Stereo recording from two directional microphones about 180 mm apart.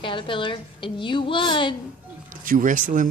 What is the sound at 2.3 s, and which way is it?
Speech, 50° right (ahead or behind).